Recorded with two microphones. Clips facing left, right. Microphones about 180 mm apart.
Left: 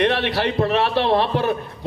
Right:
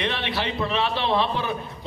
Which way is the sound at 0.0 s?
60° left (ahead or behind).